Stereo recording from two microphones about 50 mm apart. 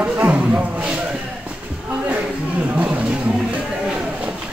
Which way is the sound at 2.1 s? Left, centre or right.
Right.